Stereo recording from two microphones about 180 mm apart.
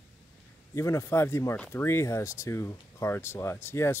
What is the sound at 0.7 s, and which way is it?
Speech, 15° left (ahead or behind).